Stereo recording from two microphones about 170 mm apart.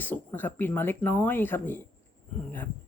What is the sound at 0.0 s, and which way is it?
A woman's voice, 10° left (ahead or behind).